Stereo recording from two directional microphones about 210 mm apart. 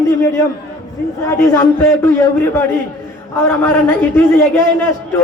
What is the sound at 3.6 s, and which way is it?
Speech, 10° left (ahead or behind).